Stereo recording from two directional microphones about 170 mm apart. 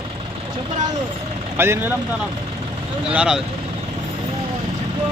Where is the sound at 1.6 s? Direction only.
15° right (ahead or behind).